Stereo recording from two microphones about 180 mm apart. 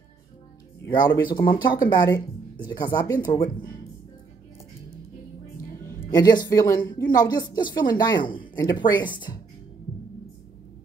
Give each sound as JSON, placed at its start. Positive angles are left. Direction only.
{"t": 0.8, "sound": "speech", "side_deg": 25}
{"t": 6.1, "sound": "speech", "side_deg": 20}